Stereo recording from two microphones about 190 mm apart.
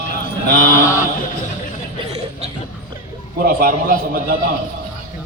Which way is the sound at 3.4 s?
50° right (ahead or behind).